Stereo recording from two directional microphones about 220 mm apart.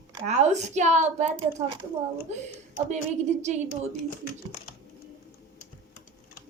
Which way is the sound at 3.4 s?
35° right (ahead or behind).